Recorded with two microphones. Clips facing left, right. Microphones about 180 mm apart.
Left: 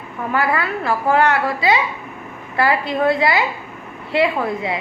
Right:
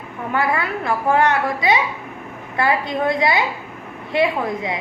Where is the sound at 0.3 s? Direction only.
20° right (ahead or behind).